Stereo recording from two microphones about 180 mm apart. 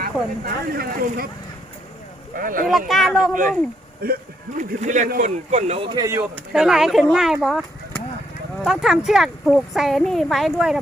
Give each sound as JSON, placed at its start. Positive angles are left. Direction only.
{"t": 0.0, "sound": "speech", "side_deg": -55}
{"t": 2.3, "sound": "speech", "side_deg": -50}
{"t": 2.6, "sound": "speech", "side_deg": 0}
{"t": 4.0, "sound": "speech", "side_deg": -55}
{"t": 4.8, "sound": "speech", "side_deg": -45}
{"t": 5.5, "sound": "speech", "side_deg": -35}
{"t": 6.5, "sound": "speech", "side_deg": 0}